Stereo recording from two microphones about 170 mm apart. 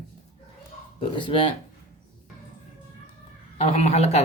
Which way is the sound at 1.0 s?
30° left (ahead or behind).